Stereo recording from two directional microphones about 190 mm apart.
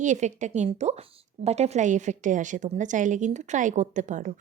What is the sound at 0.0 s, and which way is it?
A woman's voice, 40° right (ahead or behind).